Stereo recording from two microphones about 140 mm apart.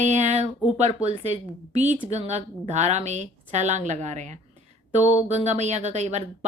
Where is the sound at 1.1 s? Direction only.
50° right (ahead or behind).